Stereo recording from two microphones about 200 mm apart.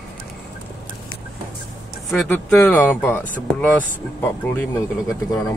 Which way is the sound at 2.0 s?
5° left (ahead or behind).